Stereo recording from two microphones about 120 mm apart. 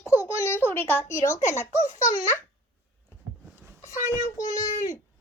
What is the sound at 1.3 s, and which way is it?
Speech, 90° left.